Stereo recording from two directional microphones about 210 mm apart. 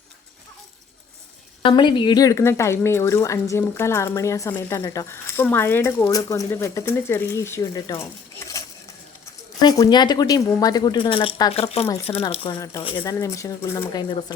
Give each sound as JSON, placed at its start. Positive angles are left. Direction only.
{"t": 1.6, "sound": "a woman's voice", "side_deg": 20}
{"t": 8.4, "sound": "dishes", "side_deg": 15}
{"t": 9.6, "sound": "a woman's voice", "side_deg": 20}